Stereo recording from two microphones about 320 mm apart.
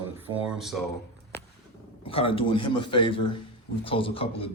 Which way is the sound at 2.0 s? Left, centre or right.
Centre.